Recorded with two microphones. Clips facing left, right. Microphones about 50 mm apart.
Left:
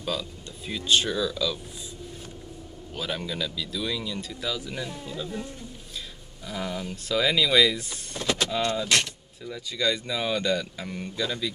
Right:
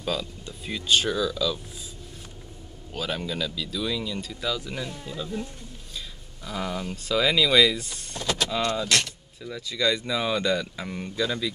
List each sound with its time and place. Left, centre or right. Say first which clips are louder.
0.0 s speech: right 2 dB; centre
3.0 s speech: right 1 dB; centre
6.4 s speech: right 1 dB; centre
8.2 s vehicle: left 1 dB; left
9.4 s speech: right 2 dB; centre